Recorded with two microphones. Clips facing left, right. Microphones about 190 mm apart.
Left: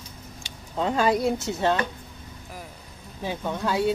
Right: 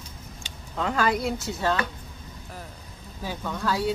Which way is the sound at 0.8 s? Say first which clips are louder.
Left 3 dB; 25° left (ahead or behind).